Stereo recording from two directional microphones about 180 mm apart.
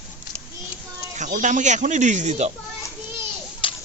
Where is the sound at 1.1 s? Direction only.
45° right (ahead or behind).